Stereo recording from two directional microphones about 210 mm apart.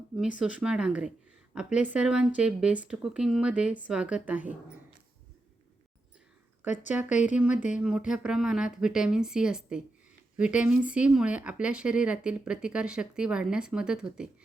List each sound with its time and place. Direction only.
0.2 s speech: 5° right (ahead or behind)
6.6 s speech: 10° right (ahead or behind)
7.5 s speech: 35° left (ahead or behind)
7.8 s speech: 5° right (ahead or behind)